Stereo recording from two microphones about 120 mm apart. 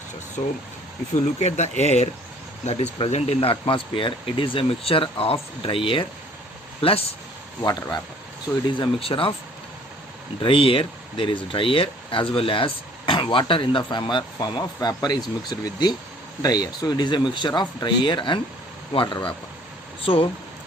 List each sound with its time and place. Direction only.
1.1 s speech: 70° left (ahead or behind); by 7.0 s 50° left (ahead or behind)
7.6 s speech: 30° left (ahead or behind)
8.7 s speech: 45° left (ahead or behind)
10.4 s speech: 50° left (ahead or behind)